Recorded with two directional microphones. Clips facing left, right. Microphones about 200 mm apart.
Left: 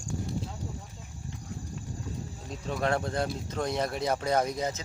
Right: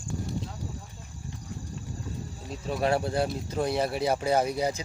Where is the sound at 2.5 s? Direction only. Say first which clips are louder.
Right 3 dB; 5° right (ahead or behind).